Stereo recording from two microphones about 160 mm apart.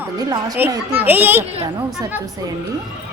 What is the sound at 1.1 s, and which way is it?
Speech, 10° right (ahead or behind).